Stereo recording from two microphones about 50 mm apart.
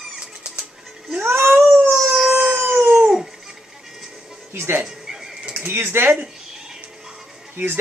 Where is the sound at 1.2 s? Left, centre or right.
Right.